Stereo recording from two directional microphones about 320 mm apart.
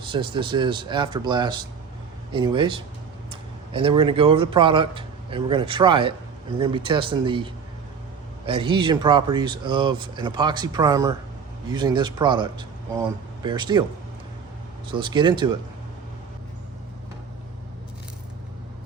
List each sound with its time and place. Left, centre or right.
0.0 s speech: centre
14.8 s speech: centre